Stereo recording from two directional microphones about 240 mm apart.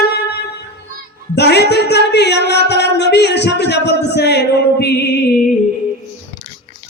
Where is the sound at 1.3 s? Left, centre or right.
Left.